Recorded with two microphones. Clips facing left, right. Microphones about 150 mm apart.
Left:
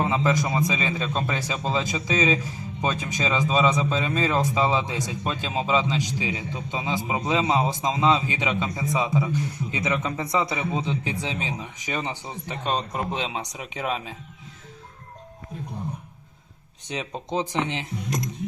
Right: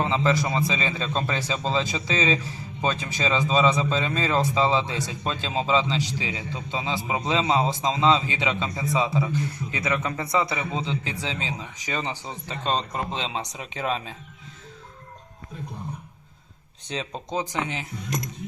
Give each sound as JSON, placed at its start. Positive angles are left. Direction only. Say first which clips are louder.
{"t": 0.0, "sound": "a man's voice", "louder": "even", "side_deg": 15}
{"t": 16.9, "sound": "speech", "louder": "left 1 dB", "side_deg": 15}